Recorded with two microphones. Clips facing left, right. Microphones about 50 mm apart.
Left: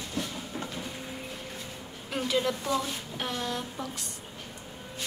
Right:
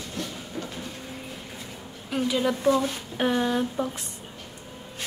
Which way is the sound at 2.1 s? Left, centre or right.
Centre.